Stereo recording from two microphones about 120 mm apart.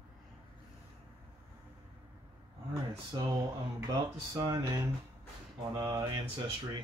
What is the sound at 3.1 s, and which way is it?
Speech, 35° right (ahead or behind).